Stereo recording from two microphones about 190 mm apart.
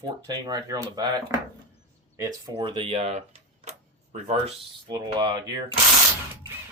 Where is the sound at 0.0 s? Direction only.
20° right (ahead or behind); by 4.5 s 35° right (ahead or behind).